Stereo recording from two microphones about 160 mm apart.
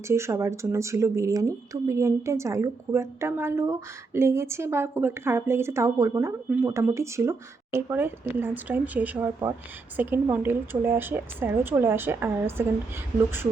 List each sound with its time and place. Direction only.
0.1 s speech: 15° right (ahead or behind)